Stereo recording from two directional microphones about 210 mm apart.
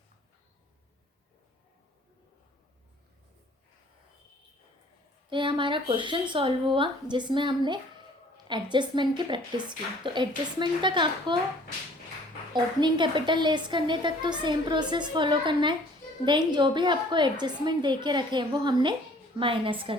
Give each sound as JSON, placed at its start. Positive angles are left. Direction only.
{"t": 5.3, "sound": "a woman's voice", "side_deg": -25}
{"t": 12.5, "sound": "a woman's voice", "side_deg": -20}